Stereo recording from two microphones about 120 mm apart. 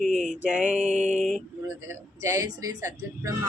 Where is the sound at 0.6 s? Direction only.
80° right.